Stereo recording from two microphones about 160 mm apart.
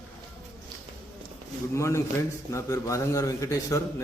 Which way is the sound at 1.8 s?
20° left (ahead or behind).